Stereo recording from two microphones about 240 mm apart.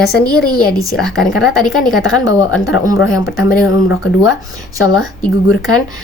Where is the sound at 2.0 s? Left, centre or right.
Left.